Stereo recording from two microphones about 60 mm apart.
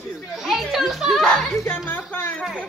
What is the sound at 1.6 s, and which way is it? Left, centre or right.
Music, left.